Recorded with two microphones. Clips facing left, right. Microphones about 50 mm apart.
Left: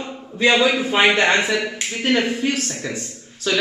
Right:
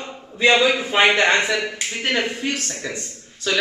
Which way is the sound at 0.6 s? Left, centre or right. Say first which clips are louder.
Even; centre.